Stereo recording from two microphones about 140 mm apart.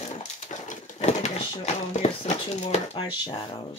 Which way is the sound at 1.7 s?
55° left (ahead or behind).